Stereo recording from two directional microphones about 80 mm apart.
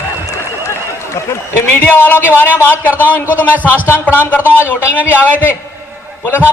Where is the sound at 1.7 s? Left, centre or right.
Left.